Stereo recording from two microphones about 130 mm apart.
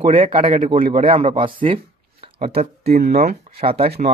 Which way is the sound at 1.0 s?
50° right (ahead or behind).